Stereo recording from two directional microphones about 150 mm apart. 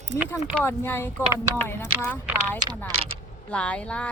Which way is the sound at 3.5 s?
10° left (ahead or behind).